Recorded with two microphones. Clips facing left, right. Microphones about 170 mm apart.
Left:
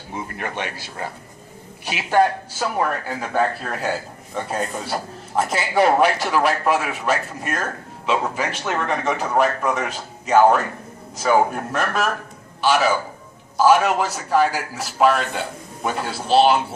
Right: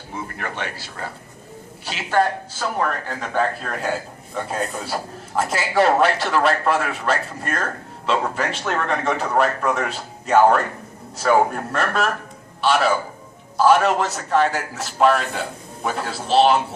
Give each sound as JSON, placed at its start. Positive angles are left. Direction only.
{"t": 0.1, "sound": "a man's voice", "side_deg": 15}